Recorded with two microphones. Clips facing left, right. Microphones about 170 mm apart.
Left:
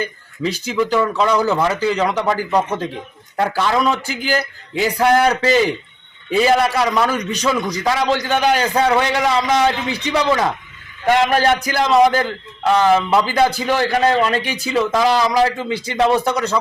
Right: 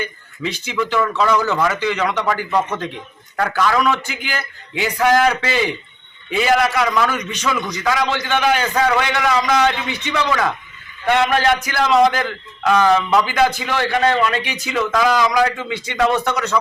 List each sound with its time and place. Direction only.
0.0 s a man's voice: 35° left (ahead or behind)